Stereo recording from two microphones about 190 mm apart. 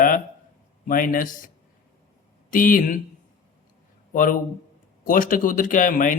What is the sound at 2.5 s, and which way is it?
Speech, 45° left (ahead or behind).